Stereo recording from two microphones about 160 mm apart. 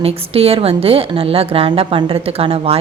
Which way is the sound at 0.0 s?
40° right (ahead or behind).